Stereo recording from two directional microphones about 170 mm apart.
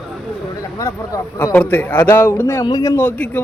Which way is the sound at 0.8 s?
20° left (ahead or behind).